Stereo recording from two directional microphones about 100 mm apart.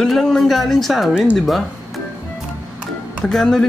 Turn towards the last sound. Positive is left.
turn(degrees=5)  # may be behind; listen again after turning